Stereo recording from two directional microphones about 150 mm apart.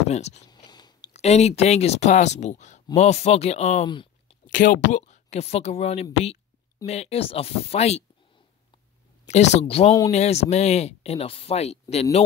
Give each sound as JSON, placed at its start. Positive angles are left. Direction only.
{"t": 0.1, "sound": "speech", "side_deg": 50}
{"t": 0.7, "sound": "a sound", "side_deg": 30}
{"t": 1.1, "sound": "speech", "side_deg": 45}
{"t": 3.8, "sound": "a sound", "side_deg": 35}
{"t": 4.5, "sound": "speech", "side_deg": 60}
{"t": 9.3, "sound": "speech", "side_deg": 50}